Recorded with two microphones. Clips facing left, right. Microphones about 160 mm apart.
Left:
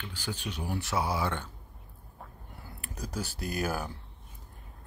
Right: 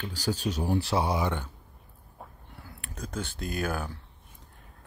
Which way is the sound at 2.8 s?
10° left (ahead or behind).